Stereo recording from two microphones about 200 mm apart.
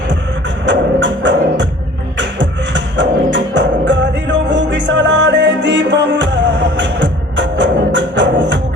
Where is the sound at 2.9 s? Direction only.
65° right (ahead or behind).